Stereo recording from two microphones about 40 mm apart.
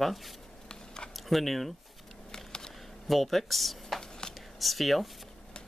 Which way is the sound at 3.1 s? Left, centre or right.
Centre.